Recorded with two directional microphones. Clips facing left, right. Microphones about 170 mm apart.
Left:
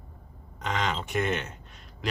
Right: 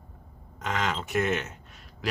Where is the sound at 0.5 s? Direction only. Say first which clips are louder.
Even; centre (ahead or behind).